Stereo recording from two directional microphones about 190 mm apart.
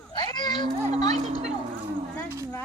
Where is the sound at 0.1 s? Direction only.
20° left (ahead or behind).